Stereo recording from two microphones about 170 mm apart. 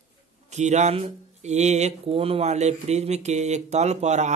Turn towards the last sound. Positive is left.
turn(degrees=-40)  # may be behind; listen again after turning